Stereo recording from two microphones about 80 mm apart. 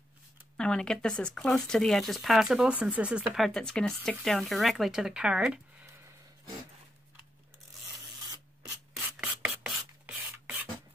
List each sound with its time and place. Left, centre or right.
0.6 s speech: centre
2.7 s speech: centre
3.3 s speech: centre
8.6 s rub: centre